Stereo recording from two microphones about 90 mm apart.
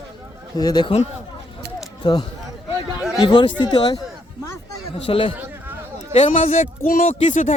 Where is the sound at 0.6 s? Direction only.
55° left (ahead or behind).